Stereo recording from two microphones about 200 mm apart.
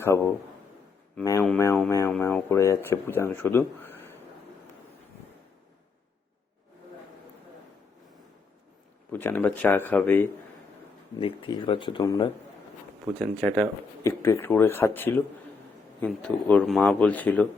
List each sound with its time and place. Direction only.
0.0 s speech: 15° left (ahead or behind)
9.1 s speech: 10° left (ahead or behind)
11.2 s speech: 25° left (ahead or behind)
13.1 s speech: centre (ahead or behind)
14.0 s speech: 15° left (ahead or behind)